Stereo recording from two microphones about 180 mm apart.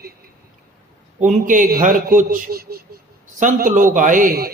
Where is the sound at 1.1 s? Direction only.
45° right (ahead or behind).